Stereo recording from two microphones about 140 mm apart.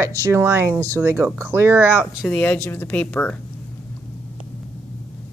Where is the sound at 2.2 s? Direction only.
10° left (ahead or behind).